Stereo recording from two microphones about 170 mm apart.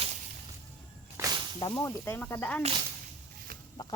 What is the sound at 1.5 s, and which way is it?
Speech, 25° left (ahead or behind).